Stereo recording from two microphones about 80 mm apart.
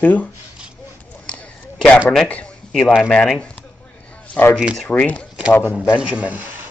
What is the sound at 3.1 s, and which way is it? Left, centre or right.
Speech, centre.